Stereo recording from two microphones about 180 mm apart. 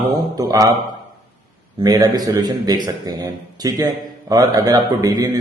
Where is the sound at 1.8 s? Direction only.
20° right (ahead or behind).